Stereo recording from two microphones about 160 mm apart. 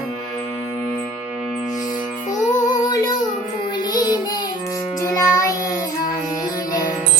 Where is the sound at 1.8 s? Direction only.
50° left (ahead or behind).